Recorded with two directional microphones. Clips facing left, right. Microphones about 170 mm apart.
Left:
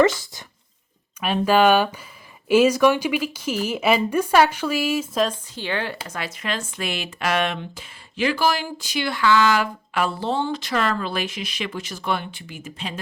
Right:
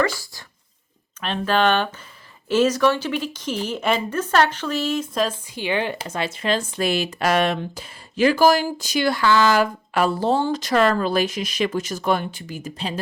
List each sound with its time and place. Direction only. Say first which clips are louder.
0.0 s speech: left 5 dB; 20° left (ahead or behind)
1.2 s speech: left 3 dB; 10° left (ahead or behind)
5.5 s speech: right 5 dB; 15° right (ahead or behind); by 12.9 s 40° right (ahead or behind)